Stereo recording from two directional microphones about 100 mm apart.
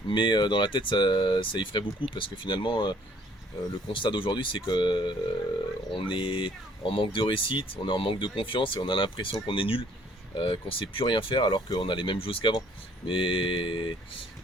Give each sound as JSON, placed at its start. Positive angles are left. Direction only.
{"t": 0.1, "sound": "speech", "side_deg": 50}